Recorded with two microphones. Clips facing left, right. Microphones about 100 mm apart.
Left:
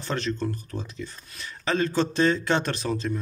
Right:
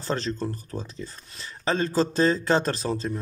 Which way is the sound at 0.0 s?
35° right (ahead or behind).